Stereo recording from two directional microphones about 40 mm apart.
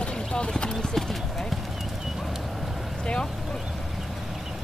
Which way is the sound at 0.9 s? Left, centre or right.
Centre.